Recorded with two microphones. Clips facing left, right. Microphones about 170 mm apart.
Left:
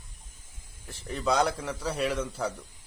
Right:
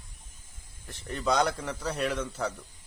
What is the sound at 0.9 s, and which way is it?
A man's voice, 5° left (ahead or behind).